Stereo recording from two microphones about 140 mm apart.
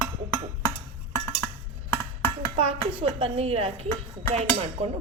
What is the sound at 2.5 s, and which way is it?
Speech, 40° right (ahead or behind).